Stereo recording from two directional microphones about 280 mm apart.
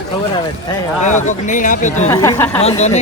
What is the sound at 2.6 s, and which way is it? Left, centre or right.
Speech, left.